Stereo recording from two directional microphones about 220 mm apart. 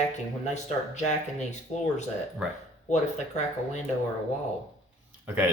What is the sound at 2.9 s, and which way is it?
Speech, 30° left (ahead or behind).